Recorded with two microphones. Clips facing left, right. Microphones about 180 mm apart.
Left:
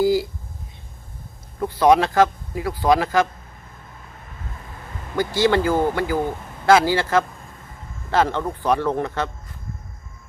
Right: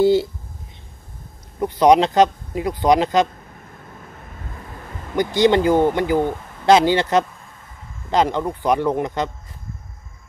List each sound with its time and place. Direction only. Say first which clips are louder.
0.0 s speech: right 3 dB; 25° right (ahead or behind)
1.6 s speech: right 2 dB; 20° right (ahead or behind)
5.1 s speech: right 3 dB; 20° right (ahead or behind)